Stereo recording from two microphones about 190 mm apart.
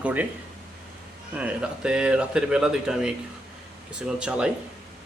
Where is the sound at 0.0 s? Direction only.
10° right (ahead or behind).